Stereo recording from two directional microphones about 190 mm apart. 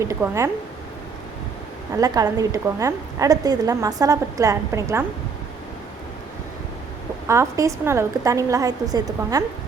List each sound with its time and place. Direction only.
0.0 s a woman's voice: 15° right (ahead or behind)
2.0 s a woman's voice: 20° right (ahead or behind)
7.3 s a woman's voice: 15° right (ahead or behind)